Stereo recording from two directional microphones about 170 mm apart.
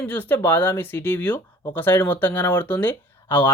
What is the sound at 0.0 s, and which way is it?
Speech, 10° left (ahead or behind).